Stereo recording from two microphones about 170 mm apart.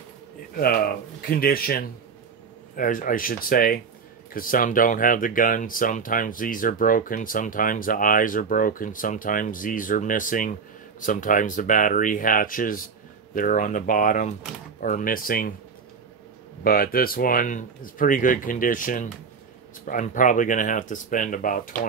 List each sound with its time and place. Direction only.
0.6 s speech: 60° left (ahead or behind)
16.6 s speech: 60° left (ahead or behind)